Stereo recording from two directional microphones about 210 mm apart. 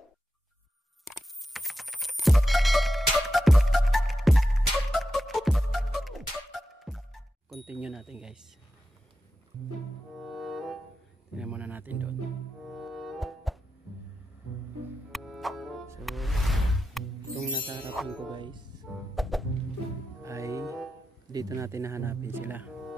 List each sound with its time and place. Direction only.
1.0 s music: centre (ahead or behind)
10.1 s music: centre (ahead or behind)
15.0 s music: centre (ahead or behind)
17.6 s music: 25° right (ahead or behind)
17.9 s music: centre (ahead or behind)
18.3 s music: 20° right (ahead or behind)
19.1 s music: centre (ahead or behind)
20.2 s music: 15° right (ahead or behind)
21.3 s speech: 15° right (ahead or behind)